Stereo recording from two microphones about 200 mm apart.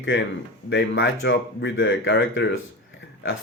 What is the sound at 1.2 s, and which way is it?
Speech, 65° left (ahead or behind).